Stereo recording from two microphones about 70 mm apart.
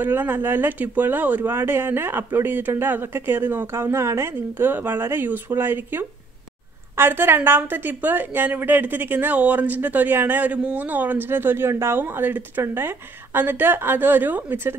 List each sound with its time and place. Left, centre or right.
0.0 s a woman's voice: right